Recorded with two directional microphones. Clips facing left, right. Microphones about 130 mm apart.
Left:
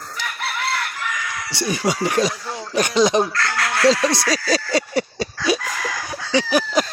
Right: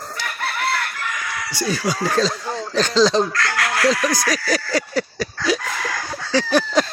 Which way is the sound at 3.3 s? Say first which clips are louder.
Even; 25° left (ahead or behind).